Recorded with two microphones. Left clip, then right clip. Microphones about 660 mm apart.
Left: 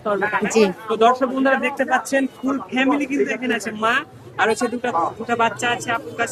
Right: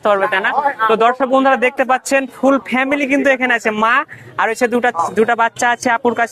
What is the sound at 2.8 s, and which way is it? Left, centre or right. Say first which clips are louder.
Speech: right 5 dB; right.